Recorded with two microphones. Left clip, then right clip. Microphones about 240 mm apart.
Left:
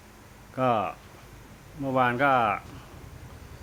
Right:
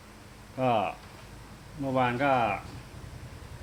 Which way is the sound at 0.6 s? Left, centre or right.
Left.